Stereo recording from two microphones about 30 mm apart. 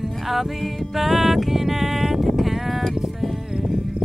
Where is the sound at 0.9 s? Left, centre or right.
Centre.